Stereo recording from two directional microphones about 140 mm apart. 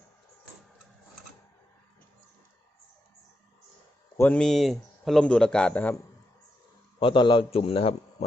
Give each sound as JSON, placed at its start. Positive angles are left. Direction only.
{"t": 4.2, "sound": "speech", "side_deg": 5}
{"t": 7.0, "sound": "a man's voice", "side_deg": 35}